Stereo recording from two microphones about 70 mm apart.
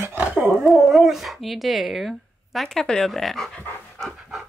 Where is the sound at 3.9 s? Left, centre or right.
Centre.